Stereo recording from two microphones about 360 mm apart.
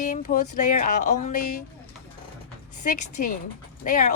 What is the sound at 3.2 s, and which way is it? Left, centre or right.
Speech, left.